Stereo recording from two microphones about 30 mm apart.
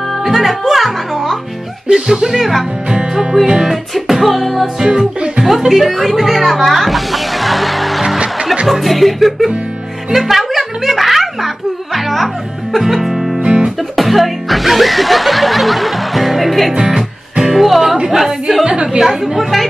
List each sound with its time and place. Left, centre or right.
0.2 s music: centre
1.9 s speech: centre
2.2 s speech: centre
2.9 s music: right
3.9 s music: centre
4.8 s music: right
5.7 s music: centre
8.6 s speech: centre
12.7 s music: centre
13.4 s music: right
13.9 s speech: centre
16.9 s music: centre
17.6 s music: centre
18.1 s speech: centre